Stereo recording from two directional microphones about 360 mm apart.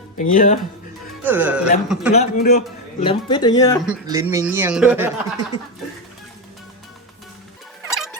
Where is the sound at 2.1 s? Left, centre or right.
Left.